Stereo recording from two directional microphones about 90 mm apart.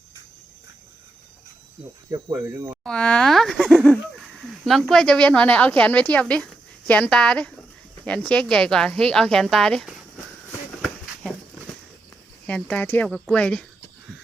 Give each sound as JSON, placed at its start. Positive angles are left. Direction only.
{"t": 2.0, "sound": "speech", "side_deg": -40}
{"t": 2.8, "sound": "speech", "side_deg": 10}
{"t": 10.8, "sound": "a sound", "side_deg": 0}
{"t": 12.5, "sound": "speech", "side_deg": 15}
{"t": 13.1, "sound": "speech", "side_deg": 0}
{"t": 13.3, "sound": "speech", "side_deg": 10}